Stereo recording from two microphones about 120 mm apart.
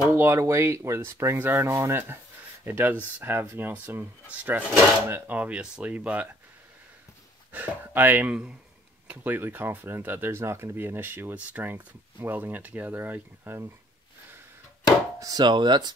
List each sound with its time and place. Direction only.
0.1 s speech: 20° right (ahead or behind)
7.5 s speech: 15° right (ahead or behind)
15.1 s chopping: 30° right (ahead or behind)